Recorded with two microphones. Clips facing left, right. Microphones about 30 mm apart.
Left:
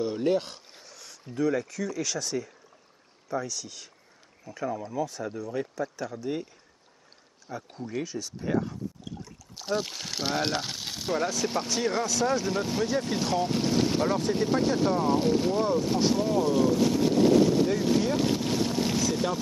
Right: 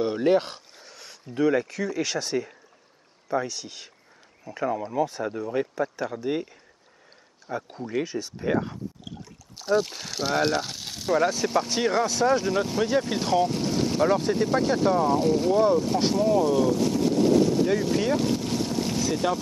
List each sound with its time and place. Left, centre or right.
0.0 s speech: right
0.8 s a sound: right
1.3 s speech: right
9.6 s speech: centre
11.9 s speech: centre
12.4 s speech: centre
13.5 s speech: centre
14.0 s speech: centre
14.3 s speech: centre
16.2 s vehicle: centre
17.7 s speech: centre
18.1 s boat: centre
18.9 s boat: centre